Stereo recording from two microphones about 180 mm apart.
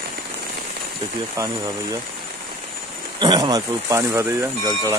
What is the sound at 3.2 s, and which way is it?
Speech, 25° right (ahead or behind).